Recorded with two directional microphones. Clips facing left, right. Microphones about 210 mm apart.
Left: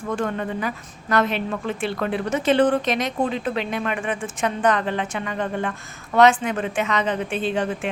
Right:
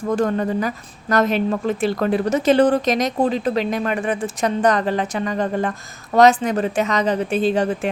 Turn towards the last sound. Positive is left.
turn(degrees=-40)  # may be behind; listen again after turning